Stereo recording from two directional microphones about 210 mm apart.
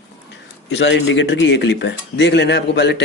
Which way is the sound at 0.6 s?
60° left (ahead or behind).